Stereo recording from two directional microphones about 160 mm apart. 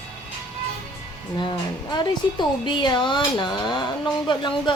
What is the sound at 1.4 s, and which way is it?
A woman's voice, 30° left (ahead or behind).